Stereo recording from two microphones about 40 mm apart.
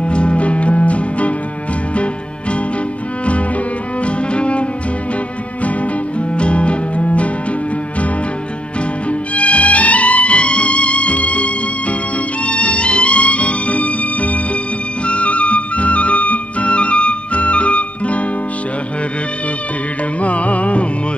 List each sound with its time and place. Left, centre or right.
0.0 s music: left
4.0 s cello: left
5.6 s music: left
9.3 s music: left
20.2 s music: left